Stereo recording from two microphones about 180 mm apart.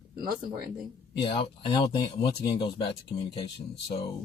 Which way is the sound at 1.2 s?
30° left (ahead or behind).